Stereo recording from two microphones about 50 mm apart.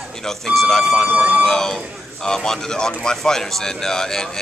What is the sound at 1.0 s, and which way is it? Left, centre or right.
Speech, right.